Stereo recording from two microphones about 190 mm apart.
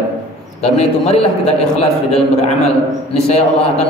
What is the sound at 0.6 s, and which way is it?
A man's voice, 35° left (ahead or behind).